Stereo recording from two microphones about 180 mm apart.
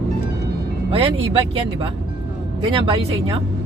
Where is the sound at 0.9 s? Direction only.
30° right (ahead or behind).